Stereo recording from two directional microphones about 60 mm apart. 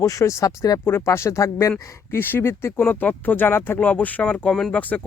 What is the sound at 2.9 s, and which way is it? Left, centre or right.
Speech, left.